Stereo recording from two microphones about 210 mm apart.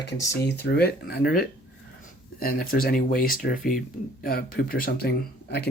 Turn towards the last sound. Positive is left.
turn(degrees=50)  # may be behind; listen again after turning